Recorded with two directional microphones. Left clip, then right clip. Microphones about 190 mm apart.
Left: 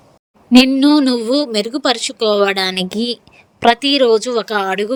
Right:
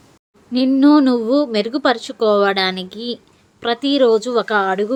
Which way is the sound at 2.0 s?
40° left (ahead or behind).